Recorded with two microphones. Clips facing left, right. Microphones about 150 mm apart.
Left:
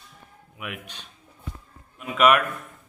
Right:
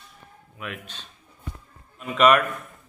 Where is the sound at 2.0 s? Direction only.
5° left (ahead or behind).